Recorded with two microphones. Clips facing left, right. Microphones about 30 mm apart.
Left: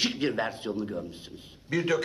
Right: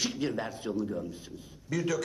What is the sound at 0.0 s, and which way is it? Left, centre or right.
A man's voice, left.